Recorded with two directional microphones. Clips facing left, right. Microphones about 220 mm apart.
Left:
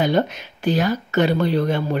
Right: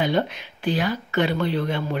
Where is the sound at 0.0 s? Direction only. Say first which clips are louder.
Left 3 dB; 45° left (ahead or behind).